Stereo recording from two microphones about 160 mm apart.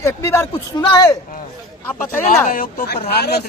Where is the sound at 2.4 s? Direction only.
60° left (ahead or behind).